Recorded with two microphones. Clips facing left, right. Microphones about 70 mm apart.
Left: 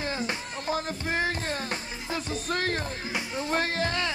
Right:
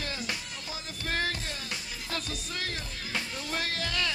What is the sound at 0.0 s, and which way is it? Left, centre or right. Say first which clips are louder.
Music: left 5 dB; left.